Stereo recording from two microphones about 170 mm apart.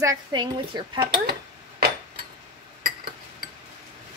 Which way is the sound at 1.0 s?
65° right (ahead or behind).